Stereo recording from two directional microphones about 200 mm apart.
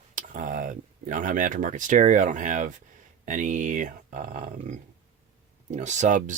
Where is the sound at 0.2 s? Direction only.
40° right (ahead or behind).